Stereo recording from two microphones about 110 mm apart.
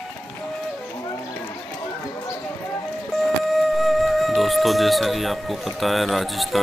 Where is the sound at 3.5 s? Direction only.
Centre (ahead or behind).